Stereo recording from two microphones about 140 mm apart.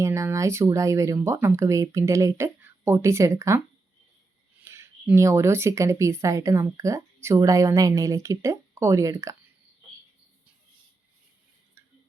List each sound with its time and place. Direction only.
0.0 s speech: 20° right (ahead or behind)
4.6 s speech: 20° right (ahead or behind)